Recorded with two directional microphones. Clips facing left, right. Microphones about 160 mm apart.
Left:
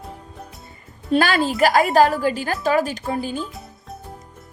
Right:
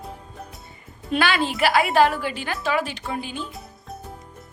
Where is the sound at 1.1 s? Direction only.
40° left (ahead or behind).